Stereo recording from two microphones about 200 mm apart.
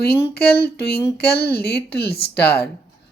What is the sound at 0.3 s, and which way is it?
Speech, 50° left (ahead or behind).